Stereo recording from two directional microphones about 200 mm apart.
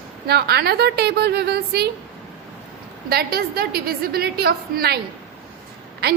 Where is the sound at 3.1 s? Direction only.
50° right (ahead or behind).